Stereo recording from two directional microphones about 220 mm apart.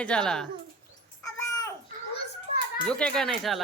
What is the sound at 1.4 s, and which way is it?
Babbling, 15° left (ahead or behind).